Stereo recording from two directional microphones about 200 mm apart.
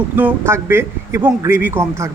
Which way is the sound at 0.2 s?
10° right (ahead or behind).